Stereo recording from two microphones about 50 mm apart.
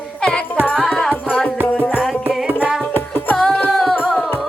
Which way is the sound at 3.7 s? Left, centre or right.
Centre.